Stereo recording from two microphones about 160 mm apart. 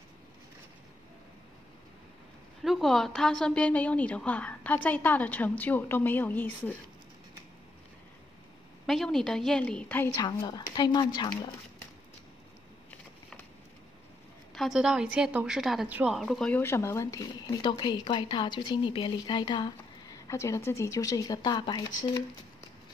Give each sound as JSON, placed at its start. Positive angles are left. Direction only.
{"t": 2.6, "sound": "a woman's voice", "side_deg": 0}
{"t": 8.8, "sound": "a woman's voice", "side_deg": 0}
{"t": 14.5, "sound": "a woman's voice", "side_deg": 0}